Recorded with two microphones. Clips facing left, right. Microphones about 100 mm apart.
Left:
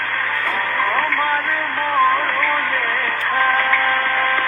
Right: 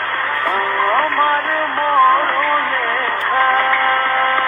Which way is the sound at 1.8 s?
35° right (ahead or behind).